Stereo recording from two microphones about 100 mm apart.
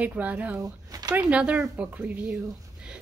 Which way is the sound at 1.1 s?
10° right (ahead or behind).